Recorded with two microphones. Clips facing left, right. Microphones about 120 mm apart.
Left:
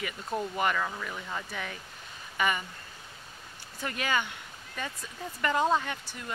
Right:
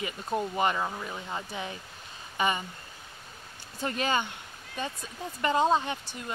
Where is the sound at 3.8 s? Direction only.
30° right (ahead or behind).